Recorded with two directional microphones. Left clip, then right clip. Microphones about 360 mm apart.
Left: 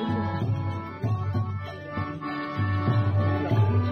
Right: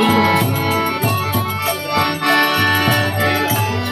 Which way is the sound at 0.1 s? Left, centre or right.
Right.